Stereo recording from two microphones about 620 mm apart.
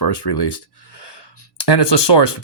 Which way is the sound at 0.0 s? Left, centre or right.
Left.